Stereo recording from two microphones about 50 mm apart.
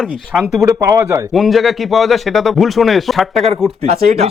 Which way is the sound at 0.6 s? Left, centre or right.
Right.